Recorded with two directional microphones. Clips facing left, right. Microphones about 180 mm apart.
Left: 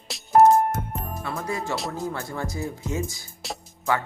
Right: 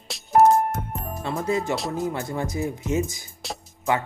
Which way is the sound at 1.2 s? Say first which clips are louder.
Right 6 dB; 25° right (ahead or behind).